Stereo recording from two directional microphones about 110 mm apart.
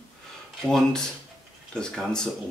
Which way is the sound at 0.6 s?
5° left (ahead or behind).